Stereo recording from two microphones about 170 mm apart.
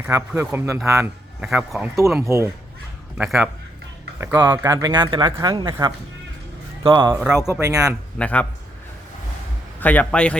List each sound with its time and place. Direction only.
0.1 s speech: 15° right (ahead or behind)
1.4 s speech: 5° right (ahead or behind)
2.2 s speech: 15° right (ahead or behind)
3.2 s speech: 5° right (ahead or behind)
4.4 s speech: 20° right (ahead or behind)
7.1 s speech: 5° right (ahead or behind)
7.6 s speech: 20° right (ahead or behind)
8.2 s a man's voice: 10° left (ahead or behind)
9.8 s a man's voice: 10° left (ahead or behind)